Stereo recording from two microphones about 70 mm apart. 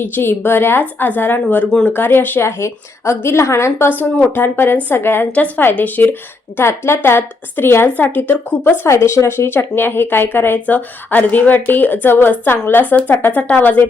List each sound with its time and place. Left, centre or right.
0.0 s a woman's voice: left
3.8 s a woman's voice: left
6.6 s a woman's voice: left
8.8 s a woman's voice: left